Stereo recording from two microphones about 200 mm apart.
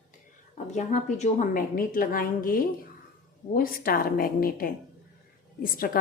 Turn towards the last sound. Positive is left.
turn(degrees=45)  # may be behind; listen again after turning